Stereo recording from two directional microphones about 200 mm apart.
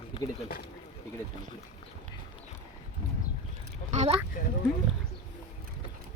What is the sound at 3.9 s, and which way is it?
Vehicle, 35° right (ahead or behind).